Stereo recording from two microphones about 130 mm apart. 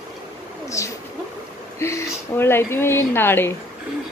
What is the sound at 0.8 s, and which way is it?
Speech, 25° left (ahead or behind).